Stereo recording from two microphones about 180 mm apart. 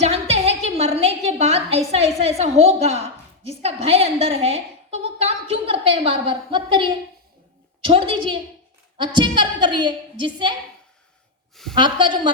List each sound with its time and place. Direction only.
0.0 s a sound: 35° right (ahead or behind)
2.4 s a woman's voice: 35° right (ahead or behind)
11.7 s a woman's voice: 25° right (ahead or behind)